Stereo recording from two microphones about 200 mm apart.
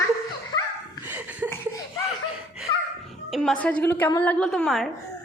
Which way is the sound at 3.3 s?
Centre (ahead or behind).